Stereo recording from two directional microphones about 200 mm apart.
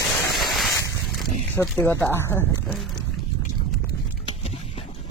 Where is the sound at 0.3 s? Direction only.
Centre (ahead or behind).